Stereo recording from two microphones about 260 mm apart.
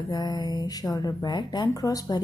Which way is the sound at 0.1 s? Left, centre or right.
Centre.